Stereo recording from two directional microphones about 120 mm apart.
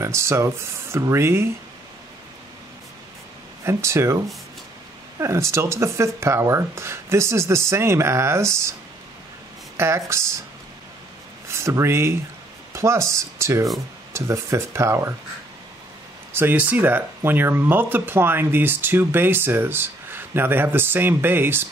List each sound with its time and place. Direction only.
0.0 s speech: 25° right (ahead or behind)
3.6 s speech: 25° right (ahead or behind)
5.2 s speech: 25° right (ahead or behind)
9.8 s speech: 25° right (ahead or behind)
11.4 s speech: 20° right (ahead or behind)
16.3 s speech: 15° right (ahead or behind)